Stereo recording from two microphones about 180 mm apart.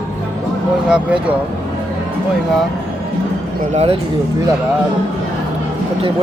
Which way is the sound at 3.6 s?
40° right (ahead or behind).